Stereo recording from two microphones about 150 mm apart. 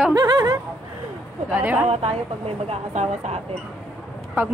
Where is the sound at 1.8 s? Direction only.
40° right (ahead or behind).